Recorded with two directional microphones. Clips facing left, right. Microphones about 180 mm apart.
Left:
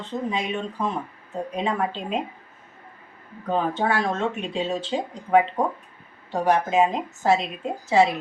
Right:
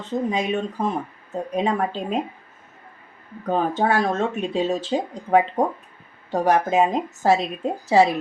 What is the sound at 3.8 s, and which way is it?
Speech, 40° right (ahead or behind).